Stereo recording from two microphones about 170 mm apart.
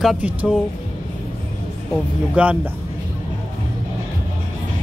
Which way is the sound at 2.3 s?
10° right (ahead or behind).